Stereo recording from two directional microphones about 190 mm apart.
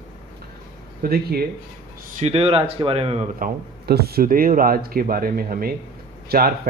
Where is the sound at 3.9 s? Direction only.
55° right (ahead or behind).